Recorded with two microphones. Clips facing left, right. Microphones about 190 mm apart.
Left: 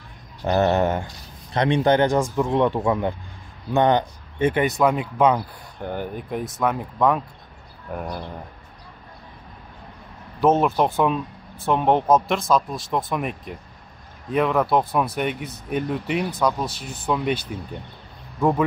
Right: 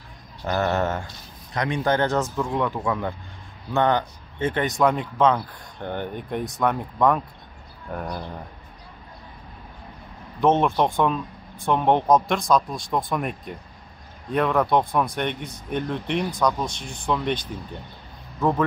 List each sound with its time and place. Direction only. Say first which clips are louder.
0.5 s speech: left 4 dB; 20° left (ahead or behind)
1.5 s speech: left 5 dB; 25° left (ahead or behind); by 8.1 s 5° left (ahead or behind)
10.4 s speech: left 1 dB; 5° left (ahead or behind)